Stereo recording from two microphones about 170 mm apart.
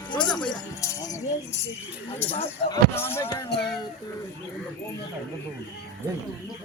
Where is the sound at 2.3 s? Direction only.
35° left (ahead or behind).